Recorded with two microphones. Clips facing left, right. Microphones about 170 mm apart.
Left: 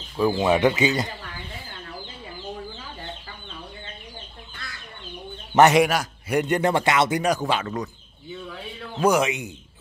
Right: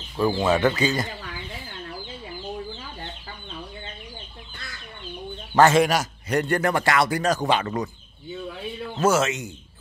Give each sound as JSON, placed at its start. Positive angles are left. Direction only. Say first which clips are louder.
{"t": 0.2, "sound": "speech", "louder": "left 1 dB", "side_deg": 15}
{"t": 5.5, "sound": "a man's voice", "louder": "left 1 dB", "side_deg": 20}
{"t": 5.9, "sound": "a man's voice", "louder": "right 1 dB", "side_deg": 5}
{"t": 6.4, "sound": "speech", "louder": "left 2 dB", "side_deg": 20}
{"t": 7.4, "sound": "speech", "louder": "right 2 dB", "side_deg": 0}
{"t": 9.0, "sound": "speech", "louder": "left 1 dB", "side_deg": 15}